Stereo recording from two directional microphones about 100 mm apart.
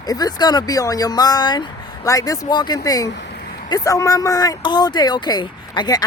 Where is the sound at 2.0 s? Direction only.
35° left (ahead or behind).